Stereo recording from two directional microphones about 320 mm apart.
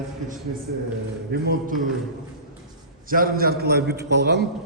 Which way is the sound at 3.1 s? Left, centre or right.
Right.